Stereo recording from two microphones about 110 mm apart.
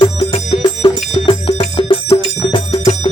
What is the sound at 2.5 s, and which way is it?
Bicycle bell, 50° left (ahead or behind).